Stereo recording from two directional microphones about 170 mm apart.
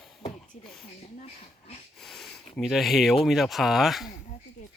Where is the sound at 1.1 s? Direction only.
40° left (ahead or behind).